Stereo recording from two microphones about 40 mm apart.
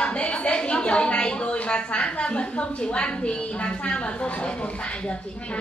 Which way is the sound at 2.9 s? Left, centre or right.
Left.